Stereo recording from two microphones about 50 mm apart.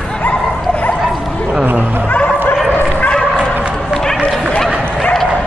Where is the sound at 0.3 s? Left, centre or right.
Left.